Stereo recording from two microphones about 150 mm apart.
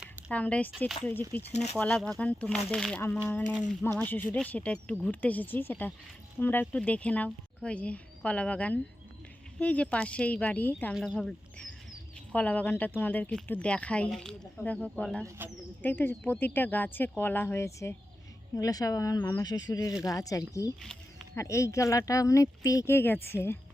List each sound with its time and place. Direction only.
0.3 s speech: 10° left (ahead or behind)
1.4 s speech: 45° left (ahead or behind)
1.8 s speech: 5° left (ahead or behind)
10.9 s speech: centre (ahead or behind)
19.5 s speech: 25° left (ahead or behind)